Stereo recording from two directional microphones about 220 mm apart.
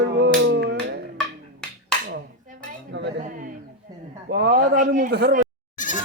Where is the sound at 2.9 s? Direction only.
50° right (ahead or behind).